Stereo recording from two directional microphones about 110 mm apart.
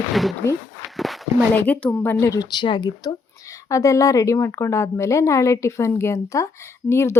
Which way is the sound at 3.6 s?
30° left (ahead or behind).